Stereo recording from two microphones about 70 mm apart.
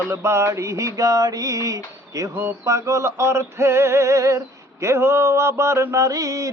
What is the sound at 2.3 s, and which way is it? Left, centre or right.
Mantra, right.